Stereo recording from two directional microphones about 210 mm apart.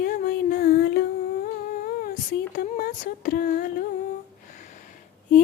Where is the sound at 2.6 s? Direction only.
45° left (ahead or behind).